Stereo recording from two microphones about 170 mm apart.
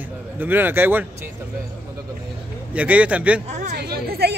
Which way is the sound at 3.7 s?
70° right (ahead or behind).